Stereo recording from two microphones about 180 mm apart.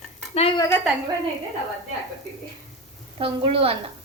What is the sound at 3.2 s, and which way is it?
Speech, 30° right (ahead or behind).